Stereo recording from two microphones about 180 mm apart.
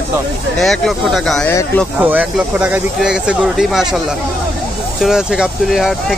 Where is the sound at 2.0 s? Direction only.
10° right (ahead or behind).